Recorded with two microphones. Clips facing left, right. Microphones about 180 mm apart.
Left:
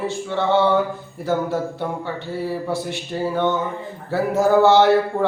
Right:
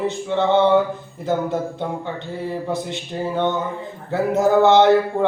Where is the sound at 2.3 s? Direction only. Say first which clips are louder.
Left 1 dB; 20° right (ahead or behind).